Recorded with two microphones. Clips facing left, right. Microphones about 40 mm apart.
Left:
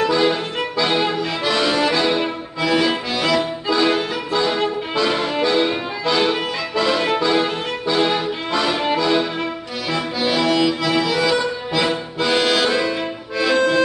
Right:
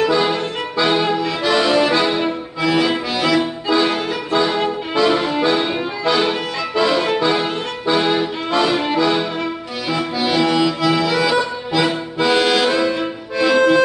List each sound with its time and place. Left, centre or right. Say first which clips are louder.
0.0 s music: right 1 dB; centre
0.9 s music: right 2 dB; centre
7.9 s accordion: right 2 dB; centre